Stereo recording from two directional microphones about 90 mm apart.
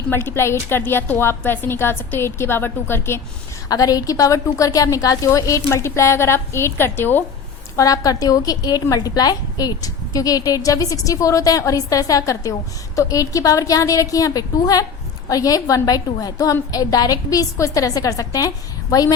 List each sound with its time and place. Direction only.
0.1 s a woman's voice: 25° left (ahead or behind)
3.7 s a woman's voice: 45° left (ahead or behind); by 7.3 s 25° left (ahead or behind)
7.8 s a woman's voice: 40° left (ahead or behind)